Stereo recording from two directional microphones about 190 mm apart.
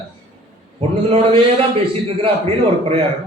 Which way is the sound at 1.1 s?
30° right (ahead or behind).